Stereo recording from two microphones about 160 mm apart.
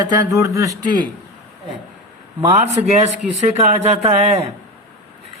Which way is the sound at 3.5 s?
45° right (ahead or behind).